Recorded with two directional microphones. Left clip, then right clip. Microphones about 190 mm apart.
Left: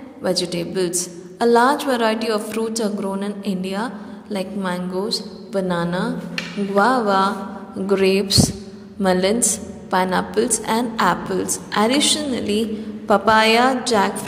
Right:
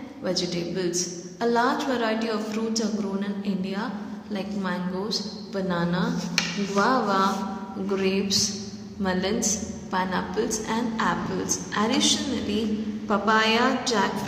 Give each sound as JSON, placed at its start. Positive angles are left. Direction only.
{"t": 0.2, "sound": "a woman's voice", "side_deg": 45}